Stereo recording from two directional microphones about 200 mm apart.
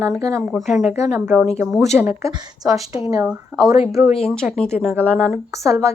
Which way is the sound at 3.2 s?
5° right (ahead or behind).